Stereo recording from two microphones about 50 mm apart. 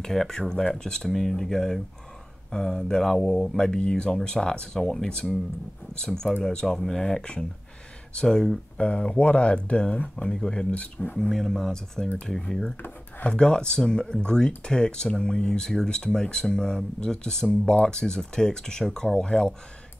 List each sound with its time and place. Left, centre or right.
0.0 s speech: centre
3.5 s speech: centre
8.7 s speech: left
10.7 s speech: left
11.1 s speech: centre